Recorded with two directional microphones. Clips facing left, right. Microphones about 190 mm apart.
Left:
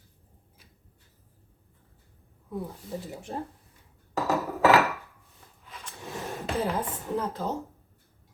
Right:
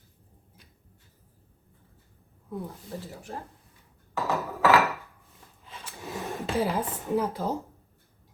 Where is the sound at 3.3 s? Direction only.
25° left (ahead or behind).